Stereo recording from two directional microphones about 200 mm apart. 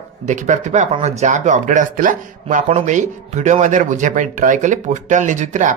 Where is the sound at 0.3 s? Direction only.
35° right (ahead or behind).